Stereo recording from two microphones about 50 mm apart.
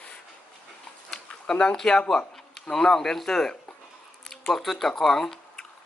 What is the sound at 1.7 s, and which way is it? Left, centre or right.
A man's voice, centre.